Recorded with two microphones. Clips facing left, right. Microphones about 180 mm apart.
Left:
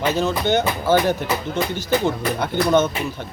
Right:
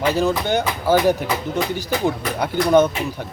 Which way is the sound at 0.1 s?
15° right (ahead or behind).